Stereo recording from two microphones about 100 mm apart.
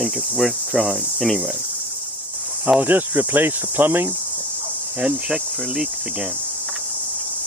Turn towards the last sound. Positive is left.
turn(degrees=-5)  # may be behind; listen again after turning